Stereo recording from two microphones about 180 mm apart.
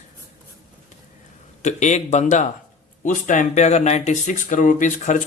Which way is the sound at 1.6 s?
40° left (ahead or behind).